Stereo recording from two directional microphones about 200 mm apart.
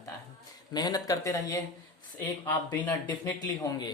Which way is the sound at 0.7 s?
20° left (ahead or behind).